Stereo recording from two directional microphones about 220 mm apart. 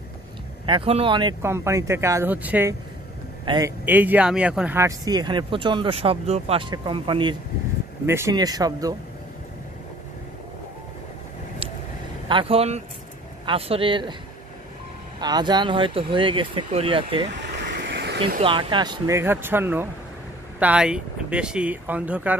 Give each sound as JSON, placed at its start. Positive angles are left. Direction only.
{"t": 0.7, "sound": "speech", "side_deg": -25}
{"t": 12.3, "sound": "speech", "side_deg": -25}
{"t": 15.1, "sound": "speech", "side_deg": -20}
{"t": 17.3, "sound": "vehicle", "side_deg": -50}
{"t": 18.4, "sound": "speech", "side_deg": -20}